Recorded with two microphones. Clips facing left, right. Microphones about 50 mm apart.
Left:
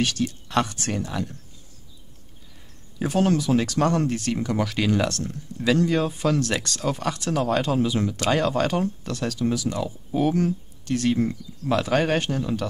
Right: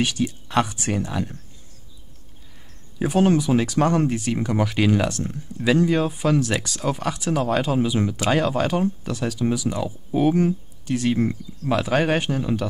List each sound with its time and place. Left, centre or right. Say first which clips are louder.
0.0 s speech: right 1 dB; centre
3.0 s speech: right 3 dB; centre
11.4 s speech: right 2 dB; right
11.7 s speech: right 1 dB; centre